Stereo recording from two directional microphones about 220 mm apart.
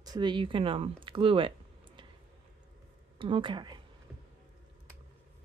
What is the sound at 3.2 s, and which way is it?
Speech, 20° right (ahead or behind).